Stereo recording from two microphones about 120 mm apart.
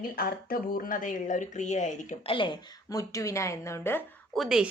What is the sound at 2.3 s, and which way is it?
Speech, 45° left (ahead or behind).